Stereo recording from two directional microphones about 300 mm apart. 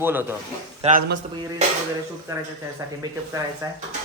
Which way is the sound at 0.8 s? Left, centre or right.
Right.